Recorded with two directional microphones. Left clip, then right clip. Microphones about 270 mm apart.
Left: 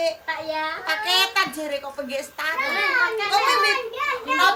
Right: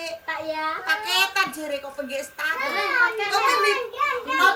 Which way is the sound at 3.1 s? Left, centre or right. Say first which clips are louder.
Left 1 dB; centre.